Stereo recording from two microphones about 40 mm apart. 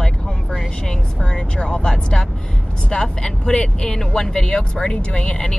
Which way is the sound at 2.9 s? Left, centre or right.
Centre.